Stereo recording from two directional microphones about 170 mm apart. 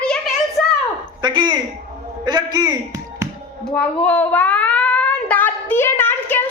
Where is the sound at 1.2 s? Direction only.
25° right (ahead or behind).